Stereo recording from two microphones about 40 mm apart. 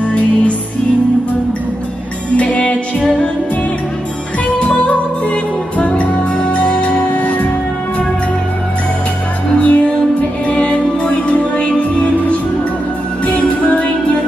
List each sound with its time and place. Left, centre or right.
0.0 s music: left
2.3 s music: left
4.6 s music: left
7.2 s music: left
9.6 s music: left